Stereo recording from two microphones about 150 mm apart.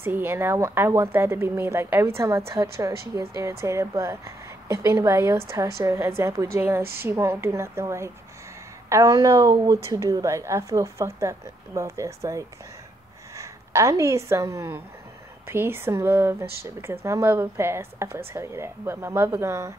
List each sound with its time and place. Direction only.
0.0 s a woman's voice: 15° right (ahead or behind)
6.8 s a woman's voice: 90° right
7.1 s a woman's voice: 15° right (ahead or behind)